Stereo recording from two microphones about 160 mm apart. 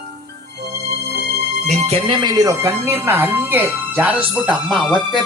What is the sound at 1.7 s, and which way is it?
Speech, 40° right (ahead or behind).